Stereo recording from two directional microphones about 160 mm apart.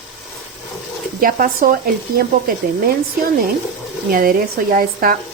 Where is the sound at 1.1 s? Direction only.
65° right (ahead or behind).